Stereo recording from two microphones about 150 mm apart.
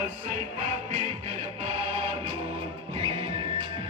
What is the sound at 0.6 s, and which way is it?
Music, 45° right (ahead or behind).